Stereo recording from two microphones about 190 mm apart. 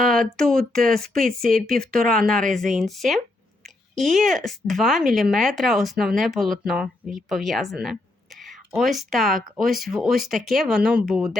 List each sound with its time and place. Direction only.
0.1 s speech: centre (ahead or behind)
1.5 s speech: 50° right (ahead or behind)
1.8 s speech: 5° left (ahead or behind)